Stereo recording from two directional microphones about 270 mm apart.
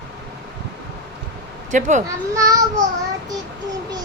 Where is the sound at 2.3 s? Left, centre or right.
Centre.